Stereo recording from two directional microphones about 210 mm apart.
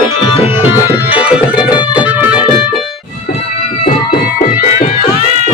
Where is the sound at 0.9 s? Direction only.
10° right (ahead or behind).